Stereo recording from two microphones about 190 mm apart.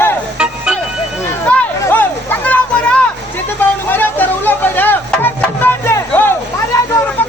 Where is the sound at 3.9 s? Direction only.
10° left (ahead or behind).